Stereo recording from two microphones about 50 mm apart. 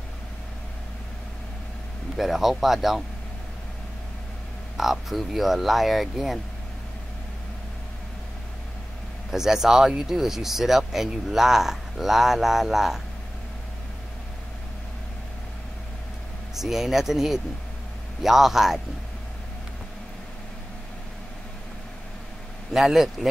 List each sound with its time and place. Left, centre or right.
2.1 s speech: centre
4.7 s speech: centre
9.3 s speech: centre
16.5 s speech: centre
22.7 s speech: centre